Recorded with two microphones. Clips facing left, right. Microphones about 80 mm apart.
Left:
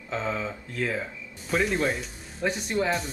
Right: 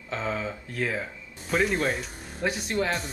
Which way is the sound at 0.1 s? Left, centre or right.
Centre.